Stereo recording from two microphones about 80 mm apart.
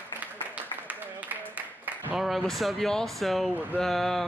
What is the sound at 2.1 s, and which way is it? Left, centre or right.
Speech, centre.